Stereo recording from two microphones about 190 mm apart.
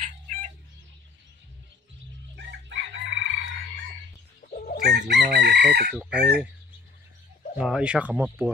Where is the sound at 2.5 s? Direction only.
70° right (ahead or behind).